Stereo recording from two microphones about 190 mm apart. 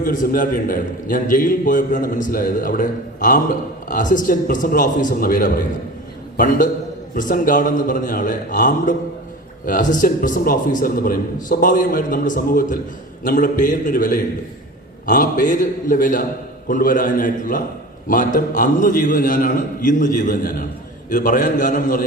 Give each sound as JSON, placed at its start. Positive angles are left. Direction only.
{"t": 0.0, "sound": "a man's voice", "side_deg": 45}